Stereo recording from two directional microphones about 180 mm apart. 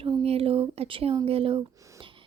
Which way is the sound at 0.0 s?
35° right (ahead or behind).